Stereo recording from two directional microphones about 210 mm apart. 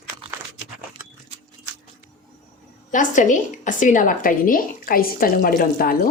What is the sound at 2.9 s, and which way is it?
A woman's voice, 35° left (ahead or behind).